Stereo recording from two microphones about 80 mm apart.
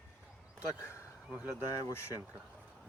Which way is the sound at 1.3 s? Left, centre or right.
Centre.